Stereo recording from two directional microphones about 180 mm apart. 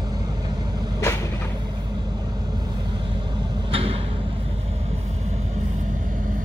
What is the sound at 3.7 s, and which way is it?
Vehicle, 30° right (ahead or behind).